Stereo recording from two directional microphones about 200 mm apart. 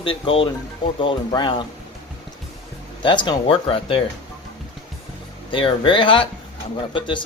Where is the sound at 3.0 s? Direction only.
25° left (ahead or behind).